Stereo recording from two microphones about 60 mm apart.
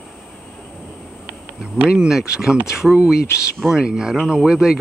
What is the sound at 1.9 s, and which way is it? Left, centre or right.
Speech, centre.